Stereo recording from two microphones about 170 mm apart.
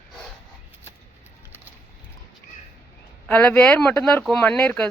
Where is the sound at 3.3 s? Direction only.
10° left (ahead or behind).